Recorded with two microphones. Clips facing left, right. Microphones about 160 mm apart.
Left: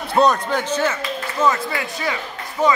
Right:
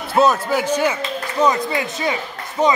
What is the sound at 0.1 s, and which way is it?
A man's voice, 5° right (ahead or behind).